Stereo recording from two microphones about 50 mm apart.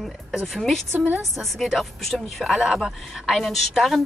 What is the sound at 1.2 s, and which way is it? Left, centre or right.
A woman's voice, centre.